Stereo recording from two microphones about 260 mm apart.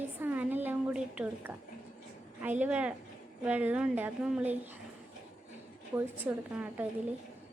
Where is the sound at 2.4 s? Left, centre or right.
Centre.